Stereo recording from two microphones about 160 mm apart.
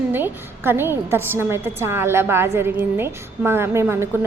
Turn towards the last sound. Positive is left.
turn(degrees=-15)  # may be behind; listen again after turning